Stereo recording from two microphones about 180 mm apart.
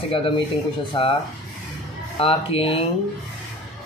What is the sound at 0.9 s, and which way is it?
Speech, 30° left (ahead or behind).